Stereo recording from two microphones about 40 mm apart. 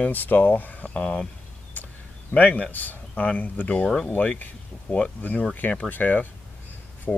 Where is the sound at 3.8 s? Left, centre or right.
Centre.